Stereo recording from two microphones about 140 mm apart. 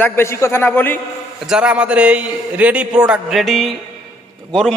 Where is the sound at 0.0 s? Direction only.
20° left (ahead or behind).